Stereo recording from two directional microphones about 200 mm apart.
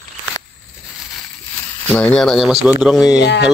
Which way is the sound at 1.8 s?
5° left (ahead or behind).